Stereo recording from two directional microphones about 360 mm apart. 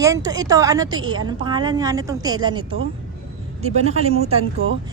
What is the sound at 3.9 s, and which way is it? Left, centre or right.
Speech, centre.